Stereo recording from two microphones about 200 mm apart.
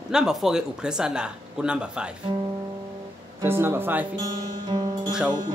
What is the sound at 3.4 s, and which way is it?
Speech, 10° right (ahead or behind).